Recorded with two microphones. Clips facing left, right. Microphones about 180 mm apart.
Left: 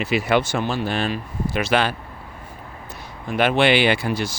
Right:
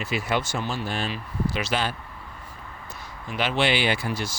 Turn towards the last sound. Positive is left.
turn(degrees=65)  # may be behind; listen again after turning